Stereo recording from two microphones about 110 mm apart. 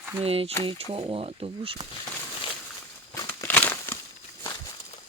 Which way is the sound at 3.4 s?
20° left (ahead or behind).